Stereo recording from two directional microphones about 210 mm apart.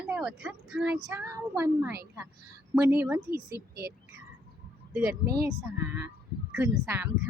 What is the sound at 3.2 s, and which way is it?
Speech, 45° right (ahead or behind).